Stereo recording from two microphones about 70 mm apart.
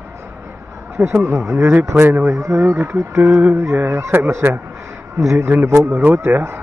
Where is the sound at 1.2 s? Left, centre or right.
Right.